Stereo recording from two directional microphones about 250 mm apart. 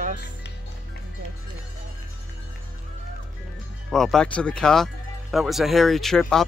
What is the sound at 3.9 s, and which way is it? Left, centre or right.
Speech, centre.